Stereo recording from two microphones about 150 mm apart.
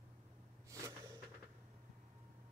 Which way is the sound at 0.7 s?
20° right (ahead or behind).